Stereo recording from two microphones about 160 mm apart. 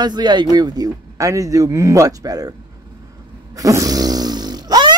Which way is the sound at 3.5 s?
20° right (ahead or behind).